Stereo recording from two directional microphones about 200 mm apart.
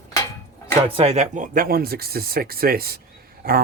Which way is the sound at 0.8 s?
30° right (ahead or behind).